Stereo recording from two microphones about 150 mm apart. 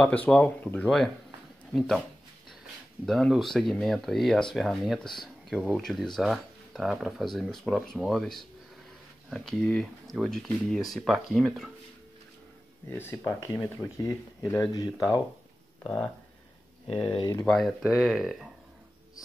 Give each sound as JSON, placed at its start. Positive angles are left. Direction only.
{"t": 0.0, "sound": "speech", "side_deg": 10}
{"t": 12.9, "sound": "speech", "side_deg": 15}
{"t": 15.8, "sound": "speech", "side_deg": 10}
{"t": 17.5, "sound": "speech", "side_deg": 0}